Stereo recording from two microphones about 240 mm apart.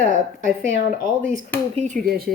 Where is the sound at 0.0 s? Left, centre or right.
Right.